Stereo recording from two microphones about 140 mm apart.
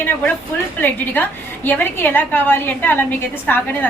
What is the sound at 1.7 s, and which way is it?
A woman's voice, 15° left (ahead or behind).